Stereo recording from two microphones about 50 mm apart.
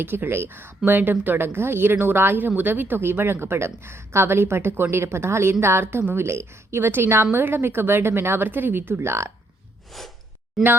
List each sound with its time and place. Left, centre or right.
0.0 s speech: right
9.0 s speech: right
9.9 s sigh: centre